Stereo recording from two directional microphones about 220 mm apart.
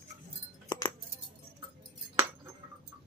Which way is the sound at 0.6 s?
20° left (ahead or behind).